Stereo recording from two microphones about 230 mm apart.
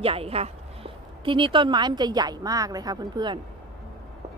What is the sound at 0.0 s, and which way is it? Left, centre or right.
Speech, right.